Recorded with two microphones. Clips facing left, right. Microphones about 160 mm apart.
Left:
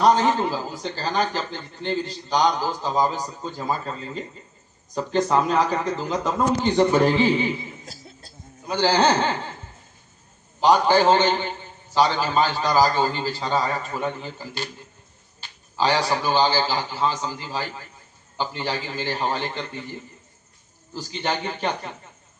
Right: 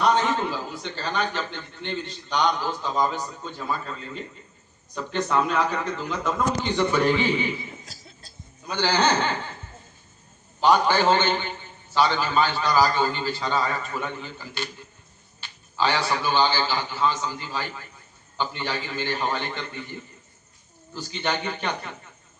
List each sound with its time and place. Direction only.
0.5 s a man's voice: 35° left (ahead or behind)
7.9 s cough: 55° left (ahead or behind)
8.8 s a man's voice: 35° left (ahead or behind)
10.6 s a man's voice: 35° left (ahead or behind)
20.9 s a man's voice: 35° left (ahead or behind)